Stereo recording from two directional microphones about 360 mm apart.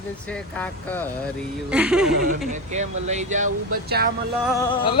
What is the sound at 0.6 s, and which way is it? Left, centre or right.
Speech, centre.